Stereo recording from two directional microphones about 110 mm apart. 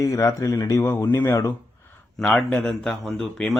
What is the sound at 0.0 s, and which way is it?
Speech, 30° left (ahead or behind).